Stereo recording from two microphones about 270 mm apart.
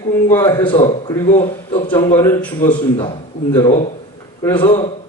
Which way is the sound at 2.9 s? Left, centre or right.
Centre.